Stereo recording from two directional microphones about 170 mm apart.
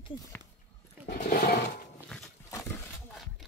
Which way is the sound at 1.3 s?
55° left (ahead or behind).